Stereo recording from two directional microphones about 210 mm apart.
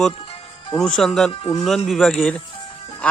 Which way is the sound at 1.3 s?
25° left (ahead or behind).